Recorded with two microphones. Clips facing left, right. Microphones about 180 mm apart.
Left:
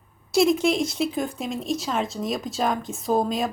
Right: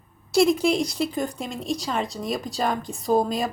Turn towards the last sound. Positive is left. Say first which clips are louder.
# right 1 dB
turn(degrees=0)  # may be behind; listen again after turning